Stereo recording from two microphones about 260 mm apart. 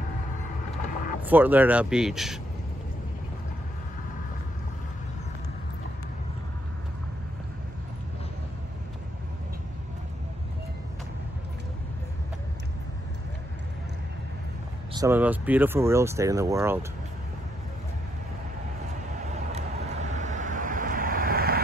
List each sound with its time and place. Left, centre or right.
1.2 s speech: centre
15.0 s speech: centre
19.5 s vehicle: right